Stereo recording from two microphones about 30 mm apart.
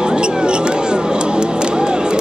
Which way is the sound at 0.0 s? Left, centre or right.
Right.